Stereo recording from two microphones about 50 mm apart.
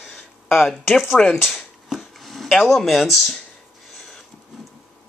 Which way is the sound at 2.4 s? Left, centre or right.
Centre.